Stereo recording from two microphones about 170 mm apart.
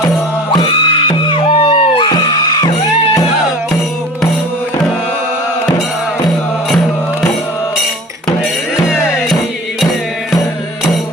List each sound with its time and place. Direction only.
0.6 s music: 30° left (ahead or behind)
8.8 s music: centre (ahead or behind)